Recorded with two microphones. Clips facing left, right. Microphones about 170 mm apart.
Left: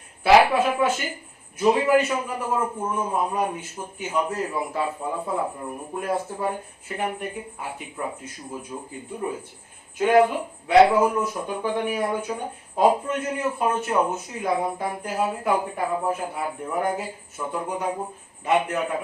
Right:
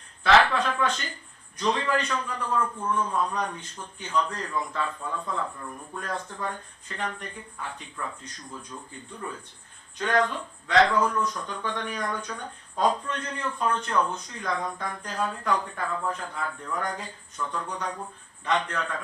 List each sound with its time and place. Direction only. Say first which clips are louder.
0.3 s speech: left 5 dB; 10° left (ahead or behind)
5.5 s speech: left 6 dB; 25° left (ahead or behind)
6.0 s speech: left 7 dB; 10° left (ahead or behind)